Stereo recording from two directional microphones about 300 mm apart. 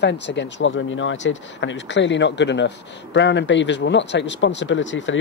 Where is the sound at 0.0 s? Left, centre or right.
Left.